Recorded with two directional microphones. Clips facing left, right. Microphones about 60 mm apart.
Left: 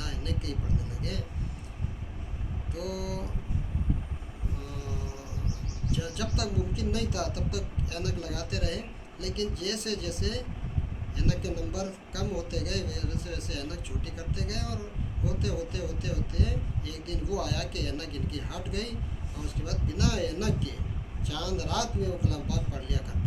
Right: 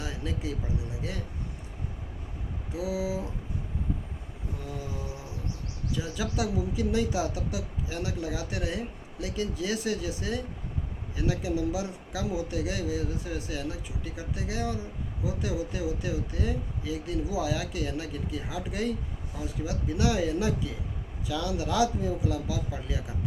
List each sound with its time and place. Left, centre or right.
0.0 s vehicle: right
2.7 s speech: right
6.0 s speech: right